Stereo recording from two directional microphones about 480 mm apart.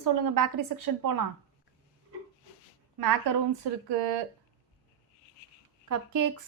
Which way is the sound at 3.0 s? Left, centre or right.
Right.